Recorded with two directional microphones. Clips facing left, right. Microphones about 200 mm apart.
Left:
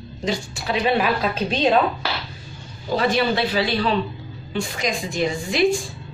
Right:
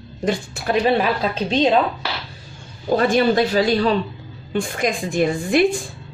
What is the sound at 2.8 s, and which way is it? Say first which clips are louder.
Speech: right 4 dB; 50° right (ahead or behind).